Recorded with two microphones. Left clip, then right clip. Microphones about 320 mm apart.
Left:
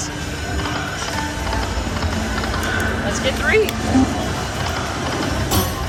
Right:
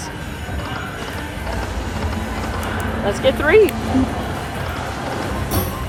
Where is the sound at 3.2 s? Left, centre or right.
Centre.